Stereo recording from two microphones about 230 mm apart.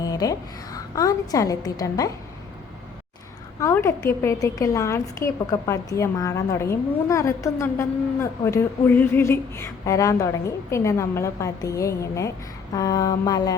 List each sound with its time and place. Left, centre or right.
0.0 s a woman's voice: centre
3.6 s a woman's voice: centre